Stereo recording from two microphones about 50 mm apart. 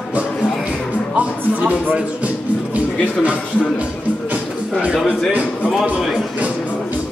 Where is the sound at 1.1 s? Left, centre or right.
Right.